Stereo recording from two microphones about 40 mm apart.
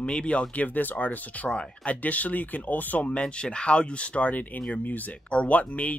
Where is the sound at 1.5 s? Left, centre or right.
Left.